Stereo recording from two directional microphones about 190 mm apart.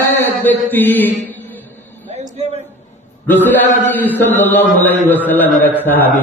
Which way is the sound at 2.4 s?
35° right (ahead or behind).